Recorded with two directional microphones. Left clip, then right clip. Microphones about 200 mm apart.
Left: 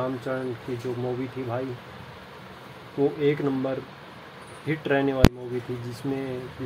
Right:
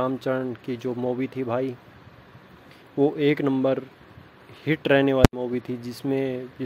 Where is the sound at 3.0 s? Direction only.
45° right (ahead or behind).